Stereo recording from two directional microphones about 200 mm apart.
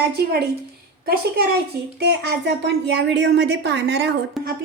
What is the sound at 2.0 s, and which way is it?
A woman's voice, 55° right (ahead or behind).